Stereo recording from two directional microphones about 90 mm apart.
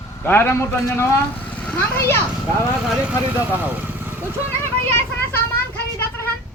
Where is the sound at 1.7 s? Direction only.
30° left (ahead or behind).